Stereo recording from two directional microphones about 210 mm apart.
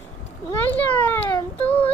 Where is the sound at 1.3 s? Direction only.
20° left (ahead or behind).